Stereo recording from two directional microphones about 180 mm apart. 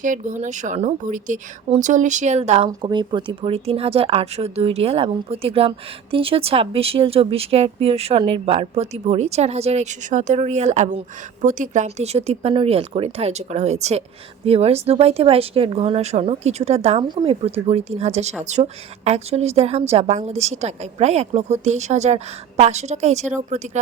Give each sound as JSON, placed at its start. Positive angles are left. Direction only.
{"t": 0.0, "sound": "a woman's voice", "side_deg": -45}
{"t": 2.8, "sound": "speech", "side_deg": -25}